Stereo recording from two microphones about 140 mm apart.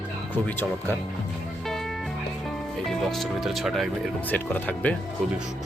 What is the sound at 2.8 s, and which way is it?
Speech, centre (ahead or behind).